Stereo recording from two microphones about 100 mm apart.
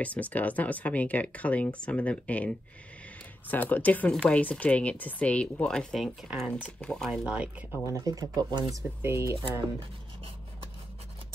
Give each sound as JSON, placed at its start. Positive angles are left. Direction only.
{"t": 0.0, "sound": "speech", "side_deg": 15}
{"t": 7.1, "sound": "speech", "side_deg": -10}
{"t": 7.9, "sound": "speech", "side_deg": -35}
{"t": 9.0, "sound": "speech", "side_deg": -25}
{"t": 9.4, "sound": "writing", "side_deg": -65}